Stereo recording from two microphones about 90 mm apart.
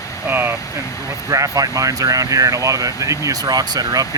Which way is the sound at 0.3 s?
25° right (ahead or behind).